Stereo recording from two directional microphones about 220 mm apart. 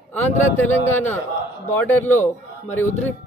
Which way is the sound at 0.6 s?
10° left (ahead or behind).